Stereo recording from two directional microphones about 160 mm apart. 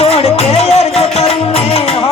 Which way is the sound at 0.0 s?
40° left (ahead or behind).